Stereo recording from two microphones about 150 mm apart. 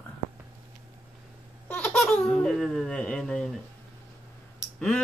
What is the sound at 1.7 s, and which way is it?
Speech, 5° left (ahead or behind).